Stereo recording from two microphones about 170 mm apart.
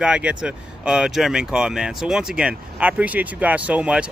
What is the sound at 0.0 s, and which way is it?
Speech, 5° right (ahead or behind).